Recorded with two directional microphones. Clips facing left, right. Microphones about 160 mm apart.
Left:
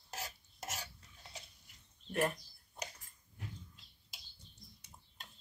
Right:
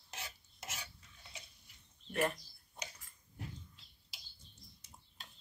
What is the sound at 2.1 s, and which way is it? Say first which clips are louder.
Speech: even; 10° left (ahead or behind).